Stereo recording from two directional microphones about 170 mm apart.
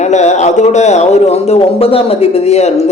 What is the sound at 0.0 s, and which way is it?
A man's voice, 45° left (ahead or behind).